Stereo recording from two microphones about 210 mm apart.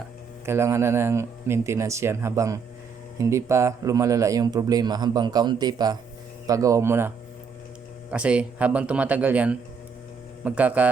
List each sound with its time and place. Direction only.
0.4 s speech: 10° right (ahead or behind)
8.1 s speech: 5° right (ahead or behind)